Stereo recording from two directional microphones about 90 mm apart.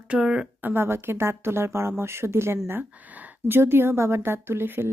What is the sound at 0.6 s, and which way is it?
A woman's voice, 25° right (ahead or behind).